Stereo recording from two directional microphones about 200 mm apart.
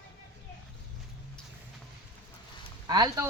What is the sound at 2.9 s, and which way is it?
Speech, 20° right (ahead or behind).